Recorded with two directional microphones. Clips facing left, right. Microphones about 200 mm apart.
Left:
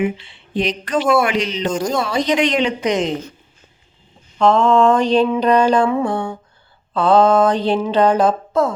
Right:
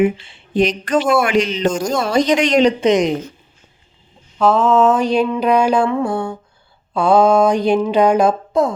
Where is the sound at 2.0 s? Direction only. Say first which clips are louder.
Right 3 dB; 45° right (ahead or behind).